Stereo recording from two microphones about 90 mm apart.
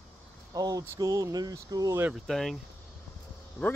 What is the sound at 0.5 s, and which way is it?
Speech, 45° right (ahead or behind).